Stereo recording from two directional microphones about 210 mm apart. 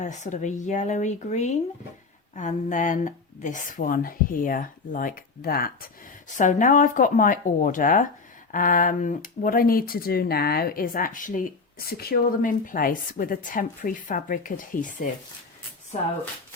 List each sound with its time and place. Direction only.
0.0 s speech: 35° left (ahead or behind)